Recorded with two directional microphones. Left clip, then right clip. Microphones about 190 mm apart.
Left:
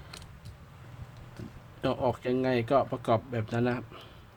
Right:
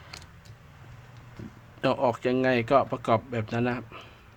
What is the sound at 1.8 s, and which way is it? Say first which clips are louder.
Speech: right 4 dB; 15° right (ahead or behind).